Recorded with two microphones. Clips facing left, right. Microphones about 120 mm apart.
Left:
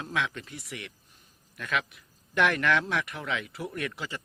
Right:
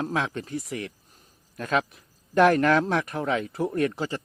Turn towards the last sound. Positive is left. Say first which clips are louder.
# right 9 dB
turn(degrees=-40)  # may be behind; listen again after turning